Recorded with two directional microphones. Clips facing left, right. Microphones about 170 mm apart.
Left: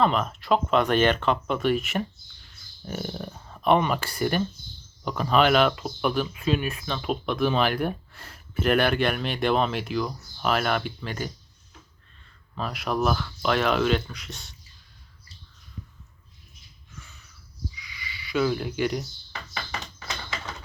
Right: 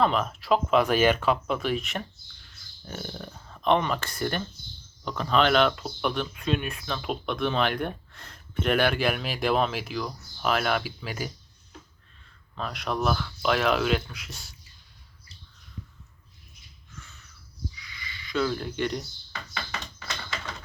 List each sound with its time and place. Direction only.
0.0 s speech: centre (ahead or behind)
12.5 s speech: 5° left (ahead or behind)
17.8 s a sound: 10° left (ahead or behind)